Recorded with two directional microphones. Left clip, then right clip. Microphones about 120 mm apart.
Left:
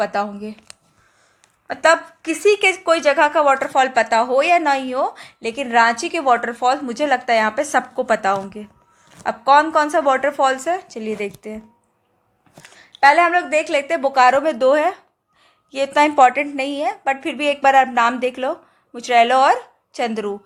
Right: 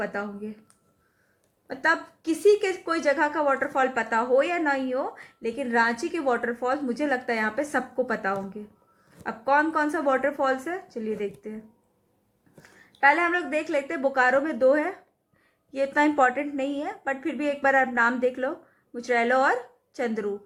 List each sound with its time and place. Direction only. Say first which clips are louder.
0.0 s speech: left 10 dB; 35° left (ahead or behind)
1.6 s a woman's voice: left 9 dB; 20° left (ahead or behind)
3.6 s a woman's voice: left 8 dB; 35° left (ahead or behind)
12.6 s a woman's voice: left 7 dB; 30° left (ahead or behind)